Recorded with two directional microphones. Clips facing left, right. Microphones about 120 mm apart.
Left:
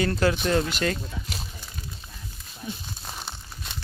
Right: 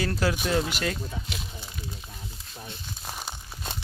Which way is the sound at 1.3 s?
40° left (ahead or behind).